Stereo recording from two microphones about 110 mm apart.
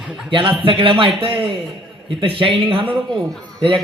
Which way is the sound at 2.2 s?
55° right (ahead or behind).